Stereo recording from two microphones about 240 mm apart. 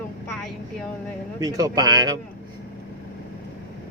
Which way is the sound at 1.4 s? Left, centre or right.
Centre.